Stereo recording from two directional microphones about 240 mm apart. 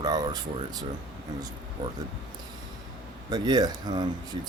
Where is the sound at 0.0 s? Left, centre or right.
Centre.